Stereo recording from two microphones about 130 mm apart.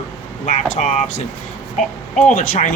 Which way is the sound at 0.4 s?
60° left (ahead or behind).